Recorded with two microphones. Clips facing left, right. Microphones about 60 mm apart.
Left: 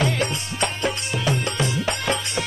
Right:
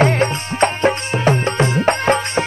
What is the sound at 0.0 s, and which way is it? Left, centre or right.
Music, right.